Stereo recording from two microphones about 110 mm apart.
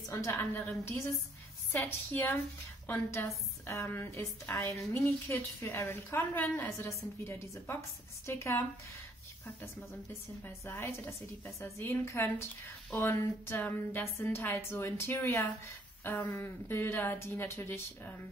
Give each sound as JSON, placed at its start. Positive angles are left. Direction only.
{"t": 0.1, "sound": "a woman's voice", "side_deg": 25}
{"t": 10.4, "sound": "a woman's voice", "side_deg": 25}